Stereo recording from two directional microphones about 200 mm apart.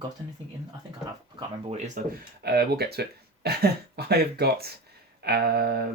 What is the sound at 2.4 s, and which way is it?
Speech, 55° right (ahead or behind).